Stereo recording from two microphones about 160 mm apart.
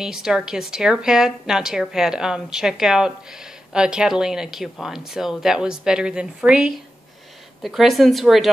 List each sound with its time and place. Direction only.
0.0 s a woman's voice: 5° right (ahead or behind)